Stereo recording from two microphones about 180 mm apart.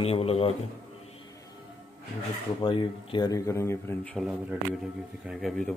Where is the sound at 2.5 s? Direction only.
25° left (ahead or behind).